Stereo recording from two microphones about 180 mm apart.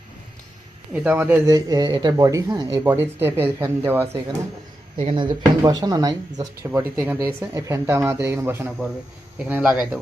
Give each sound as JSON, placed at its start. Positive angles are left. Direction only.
{"t": 0.9, "sound": "speech", "side_deg": -10}